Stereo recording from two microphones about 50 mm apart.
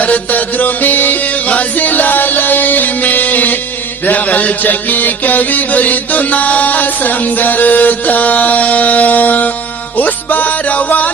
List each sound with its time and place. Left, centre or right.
0.0 s music: left